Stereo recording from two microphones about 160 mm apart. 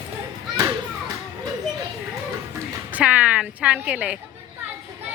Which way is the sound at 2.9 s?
10° right (ahead or behind).